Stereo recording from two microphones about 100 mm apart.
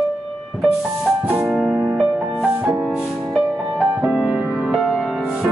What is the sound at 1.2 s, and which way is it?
Music, 15° right (ahead or behind).